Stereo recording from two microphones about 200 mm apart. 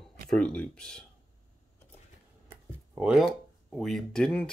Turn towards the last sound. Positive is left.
turn(degrees=5)  # may be behind; listen again after turning